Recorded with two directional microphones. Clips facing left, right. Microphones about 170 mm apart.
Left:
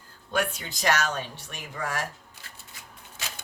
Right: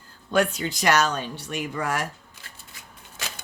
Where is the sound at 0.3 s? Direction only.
85° right.